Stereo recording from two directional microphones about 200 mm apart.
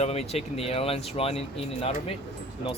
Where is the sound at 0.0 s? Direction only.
30° left (ahead or behind).